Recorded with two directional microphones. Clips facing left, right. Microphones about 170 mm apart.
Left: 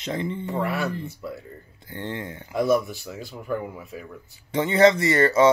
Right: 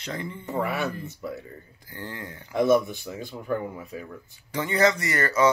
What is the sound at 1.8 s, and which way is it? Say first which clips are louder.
Speech: left 6 dB; 25° left (ahead or behind).